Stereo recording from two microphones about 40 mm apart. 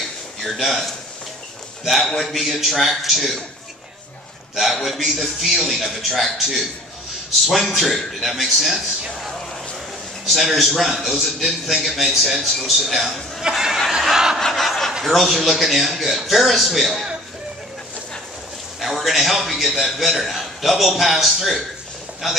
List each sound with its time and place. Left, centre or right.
0.4 s a man's voice: centre
1.9 s a man's voice: centre
4.8 s a man's voice: centre
10.2 s a man's voice: centre
13.4 s speech: centre
14.0 s snicker: centre
14.4 s snicker: centre
15.0 s a man's voice: centre
18.8 s a man's voice: centre